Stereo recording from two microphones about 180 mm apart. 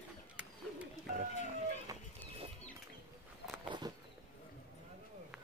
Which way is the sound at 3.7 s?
25° right (ahead or behind).